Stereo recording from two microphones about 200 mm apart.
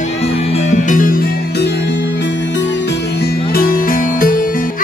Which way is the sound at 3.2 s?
45° left (ahead or behind).